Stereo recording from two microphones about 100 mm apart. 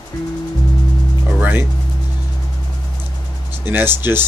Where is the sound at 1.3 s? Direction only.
20° right (ahead or behind).